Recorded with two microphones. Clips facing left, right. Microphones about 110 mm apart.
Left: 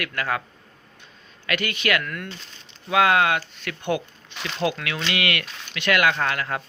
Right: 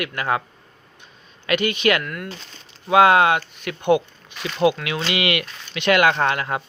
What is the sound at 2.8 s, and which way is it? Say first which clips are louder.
A man's voice: right 5 dB; 25° right (ahead or behind).